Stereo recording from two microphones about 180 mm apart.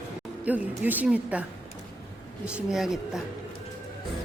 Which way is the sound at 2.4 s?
5° right (ahead or behind).